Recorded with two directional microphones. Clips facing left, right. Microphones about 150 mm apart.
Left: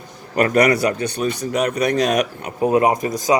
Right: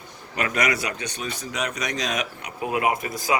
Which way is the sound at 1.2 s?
50° left (ahead or behind).